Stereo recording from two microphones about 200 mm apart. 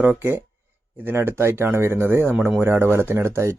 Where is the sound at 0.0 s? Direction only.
10° right (ahead or behind).